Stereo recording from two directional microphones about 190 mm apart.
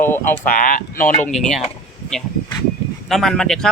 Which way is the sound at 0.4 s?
45° left (ahead or behind).